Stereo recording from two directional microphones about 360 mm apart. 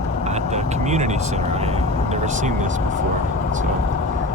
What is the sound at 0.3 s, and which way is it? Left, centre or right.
Speech, centre.